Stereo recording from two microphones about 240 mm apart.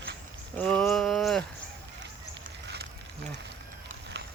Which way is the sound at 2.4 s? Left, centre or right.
Right.